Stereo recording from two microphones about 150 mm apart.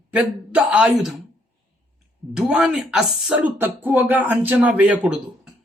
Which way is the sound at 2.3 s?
5° right (ahead or behind).